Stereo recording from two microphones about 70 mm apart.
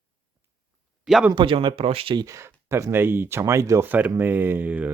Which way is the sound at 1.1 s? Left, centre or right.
Centre.